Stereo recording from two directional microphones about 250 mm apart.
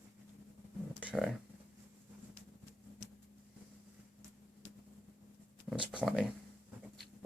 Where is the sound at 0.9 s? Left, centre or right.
Centre.